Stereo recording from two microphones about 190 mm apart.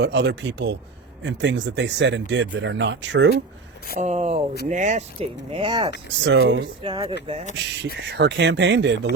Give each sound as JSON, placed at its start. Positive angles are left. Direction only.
{"t": 0.0, "sound": "speech", "side_deg": -60}
{"t": 3.9, "sound": "speech", "side_deg": -35}
{"t": 6.2, "sound": "speech", "side_deg": -70}
{"t": 6.8, "sound": "speech", "side_deg": -25}
{"t": 7.5, "sound": "speech", "side_deg": -60}